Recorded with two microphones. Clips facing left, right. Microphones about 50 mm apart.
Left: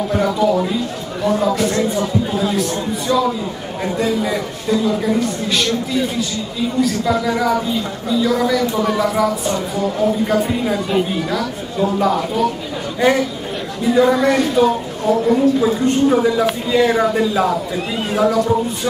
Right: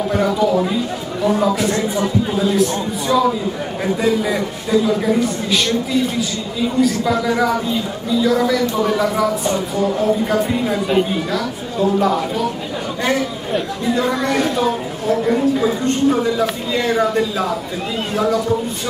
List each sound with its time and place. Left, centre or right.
0.1 s speech: centre
6.8 s speech: centre
13.8 s speech: centre